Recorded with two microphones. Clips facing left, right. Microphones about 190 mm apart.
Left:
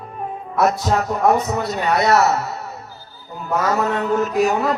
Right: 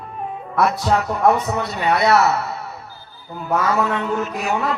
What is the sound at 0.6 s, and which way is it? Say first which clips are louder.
Speech: even; 40° left (ahead or behind).